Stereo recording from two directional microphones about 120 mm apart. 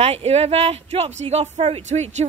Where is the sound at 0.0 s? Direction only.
60° right (ahead or behind).